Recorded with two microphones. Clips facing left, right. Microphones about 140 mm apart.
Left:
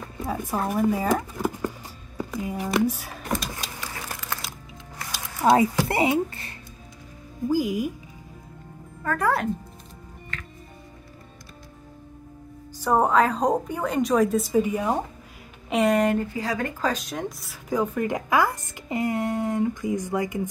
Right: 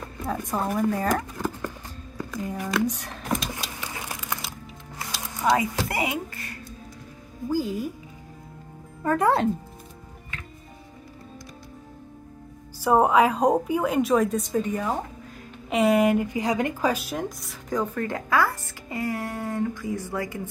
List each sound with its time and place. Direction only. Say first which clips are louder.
0.0 s speech: even; 5° left (ahead or behind)
2.1 s a sound: left 2 dB; 10° left (ahead or behind)
2.5 s speech: left 2 dB; 25° left (ahead or behind)
2.9 s a woman's voice: even; 5° left (ahead or behind)
3.9 s a sound: right 1 dB; 15° right (ahead or behind)
5.4 s speech: left 4 dB; 30° left (ahead or behind)
7.4 s speech: left 3 dB; 10° left (ahead or behind)
9.0 s speech: right 3 dB; 20° right (ahead or behind)
12.7 s a woman's voice: right 1 dB; 10° right (ahead or behind); by 15.0 s 10° left (ahead or behind)
15.7 s speech: right 1 dB; centre (ahead or behind); by 20.4 s 20° left (ahead or behind)